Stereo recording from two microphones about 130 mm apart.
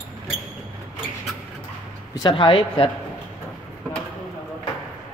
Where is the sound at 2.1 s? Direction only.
40° left (ahead or behind).